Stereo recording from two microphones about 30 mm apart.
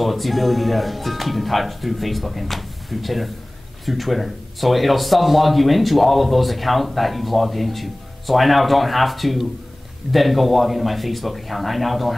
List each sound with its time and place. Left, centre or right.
0.0 s speech: centre